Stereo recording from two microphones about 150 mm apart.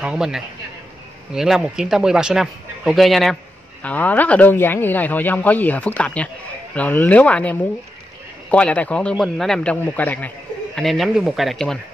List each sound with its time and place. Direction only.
0.0 s a man's voice: 5° right (ahead or behind)